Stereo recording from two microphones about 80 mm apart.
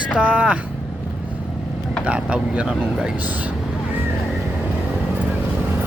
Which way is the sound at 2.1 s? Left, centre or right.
Centre.